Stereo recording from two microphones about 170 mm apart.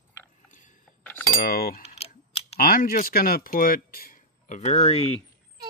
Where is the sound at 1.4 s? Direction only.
55° left (ahead or behind); by 5.2 s 35° left (ahead or behind).